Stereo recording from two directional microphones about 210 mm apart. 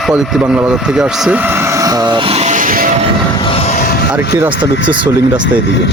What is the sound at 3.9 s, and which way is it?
Vehicle, 50° left (ahead or behind).